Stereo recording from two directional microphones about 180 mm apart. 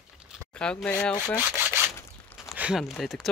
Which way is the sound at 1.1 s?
20° left (ahead or behind).